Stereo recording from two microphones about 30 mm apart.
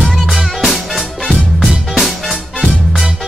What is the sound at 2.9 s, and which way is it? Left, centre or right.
Music, right.